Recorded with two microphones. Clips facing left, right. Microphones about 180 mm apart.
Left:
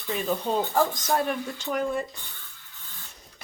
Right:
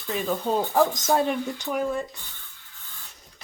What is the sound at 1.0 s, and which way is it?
Speech, 25° right (ahead or behind).